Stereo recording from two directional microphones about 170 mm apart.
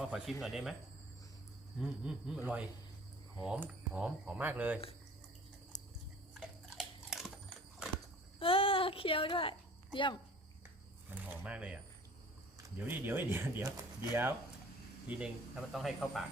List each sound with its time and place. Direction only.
0.0 s speech: centre (ahead or behind)
1.8 s speech: 5° right (ahead or behind)
5.7 s a sound: 45° left (ahead or behind)
6.3 s biting: centre (ahead or behind)
8.4 s a sound: 35° left (ahead or behind)
11.1 s speech: 5° right (ahead or behind)